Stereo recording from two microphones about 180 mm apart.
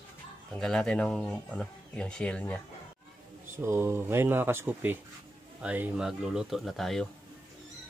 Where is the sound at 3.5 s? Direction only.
15° right (ahead or behind).